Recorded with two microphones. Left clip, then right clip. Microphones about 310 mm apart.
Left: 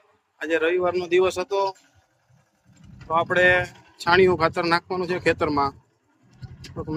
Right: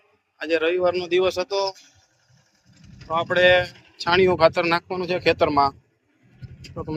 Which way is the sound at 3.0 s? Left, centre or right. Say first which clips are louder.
Right 1 dB; centre.